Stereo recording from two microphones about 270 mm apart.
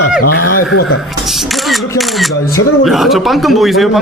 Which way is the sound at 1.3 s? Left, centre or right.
Centre.